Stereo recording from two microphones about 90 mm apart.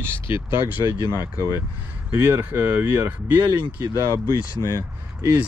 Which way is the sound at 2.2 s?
20° right (ahead or behind).